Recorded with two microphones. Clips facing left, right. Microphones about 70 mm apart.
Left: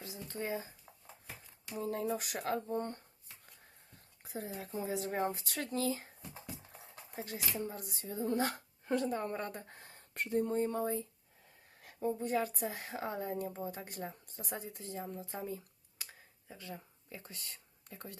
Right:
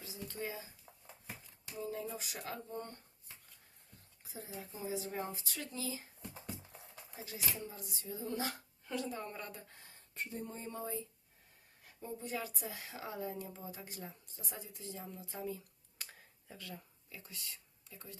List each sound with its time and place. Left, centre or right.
0.0 s speech: left
1.8 s speech: left
4.2 s speech: left
7.1 s speech: left
11.8 s speech: left
16.0 s a sound: centre
16.5 s speech: left
17.2 s speech: left